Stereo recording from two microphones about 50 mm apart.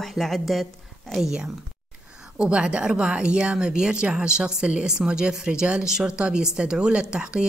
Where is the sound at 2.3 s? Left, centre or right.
Centre.